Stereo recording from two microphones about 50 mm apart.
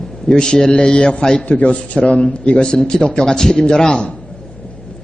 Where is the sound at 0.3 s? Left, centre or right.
Centre.